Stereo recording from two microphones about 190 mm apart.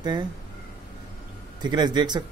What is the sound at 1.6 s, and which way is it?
Speech, 25° right (ahead or behind).